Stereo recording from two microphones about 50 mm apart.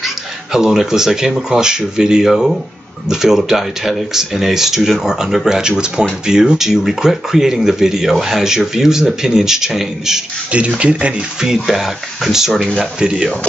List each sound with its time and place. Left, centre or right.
0.0 s speech: centre
10.8 s speech: right
11.4 s speech: centre